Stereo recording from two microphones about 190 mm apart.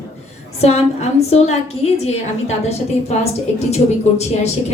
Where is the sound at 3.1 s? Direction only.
35° left (ahead or behind).